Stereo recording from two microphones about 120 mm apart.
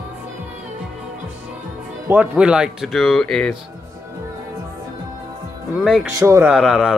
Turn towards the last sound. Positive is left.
turn(degrees=0)  # may be behind; listen again after turning